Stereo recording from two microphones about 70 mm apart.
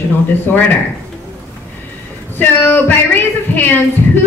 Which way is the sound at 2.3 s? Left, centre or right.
Left.